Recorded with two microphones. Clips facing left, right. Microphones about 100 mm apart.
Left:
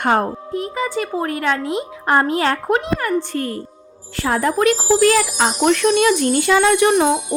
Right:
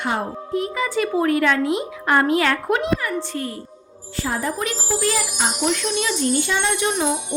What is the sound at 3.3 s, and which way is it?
Speech, 50° left (ahead or behind).